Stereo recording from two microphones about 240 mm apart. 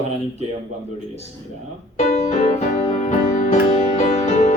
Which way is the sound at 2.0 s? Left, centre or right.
Left.